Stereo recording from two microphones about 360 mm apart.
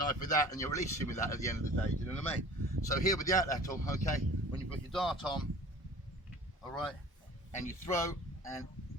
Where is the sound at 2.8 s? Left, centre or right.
Centre.